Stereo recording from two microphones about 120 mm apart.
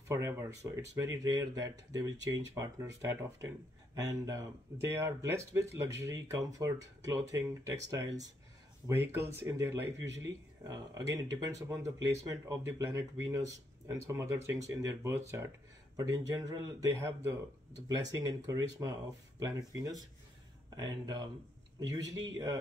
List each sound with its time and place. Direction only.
0.1 s speech: 25° right (ahead or behind)
16.9 s speech: 20° right (ahead or behind)